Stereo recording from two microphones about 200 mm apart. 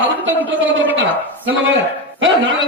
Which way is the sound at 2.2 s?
65° right (ahead or behind).